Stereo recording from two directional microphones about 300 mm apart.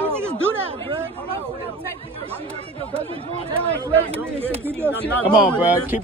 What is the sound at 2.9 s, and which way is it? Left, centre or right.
Speech, centre.